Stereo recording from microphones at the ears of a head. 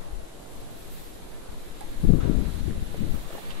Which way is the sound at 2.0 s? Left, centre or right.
Left.